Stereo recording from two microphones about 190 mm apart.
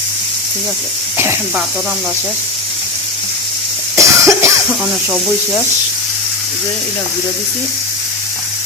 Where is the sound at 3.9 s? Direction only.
15° right (ahead or behind).